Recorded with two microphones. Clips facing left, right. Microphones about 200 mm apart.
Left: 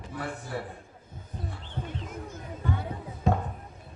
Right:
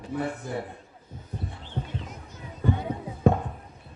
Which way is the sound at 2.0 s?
50° left (ahead or behind).